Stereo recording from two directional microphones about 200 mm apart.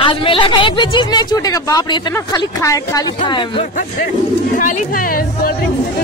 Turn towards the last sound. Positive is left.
turn(degrees=45)  # may be behind; listen again after turning